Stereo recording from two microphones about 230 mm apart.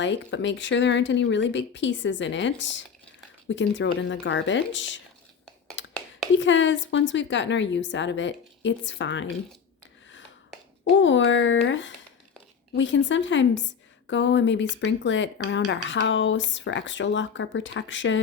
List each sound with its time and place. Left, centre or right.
0.0 s speech: left
5.8 s whispering: left
6.3 s speech: left
10.9 s speech: left